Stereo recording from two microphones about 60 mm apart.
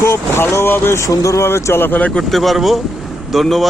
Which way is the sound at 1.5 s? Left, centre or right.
Left.